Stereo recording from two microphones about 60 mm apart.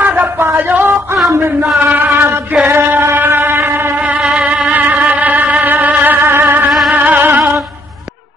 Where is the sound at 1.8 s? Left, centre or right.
Right.